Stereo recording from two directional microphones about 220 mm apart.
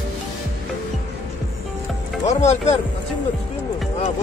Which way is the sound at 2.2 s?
30° left (ahead or behind).